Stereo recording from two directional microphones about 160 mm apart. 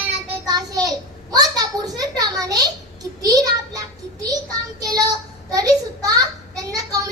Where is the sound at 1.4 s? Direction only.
25° right (ahead or behind).